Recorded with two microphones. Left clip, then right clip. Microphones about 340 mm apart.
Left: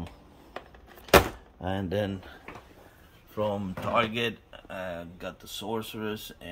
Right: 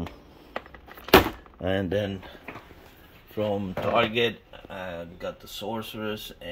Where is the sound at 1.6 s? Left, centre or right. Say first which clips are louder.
Right 6 dB; centre.